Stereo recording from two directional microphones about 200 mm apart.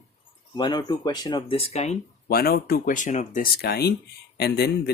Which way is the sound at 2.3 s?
50° left (ahead or behind).